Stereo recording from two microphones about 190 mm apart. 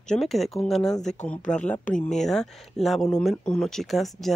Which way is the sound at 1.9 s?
45° left (ahead or behind).